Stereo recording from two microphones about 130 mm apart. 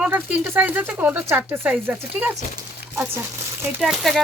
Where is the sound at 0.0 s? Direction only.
15° right (ahead or behind).